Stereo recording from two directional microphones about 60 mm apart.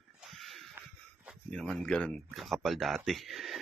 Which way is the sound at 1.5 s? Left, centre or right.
Centre.